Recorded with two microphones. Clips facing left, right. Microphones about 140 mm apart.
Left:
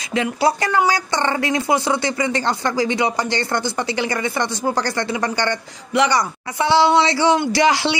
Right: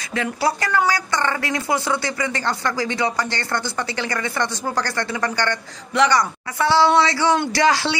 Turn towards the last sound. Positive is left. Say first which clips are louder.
# left 2 dB
turn(degrees=15)  # may be behind; listen again after turning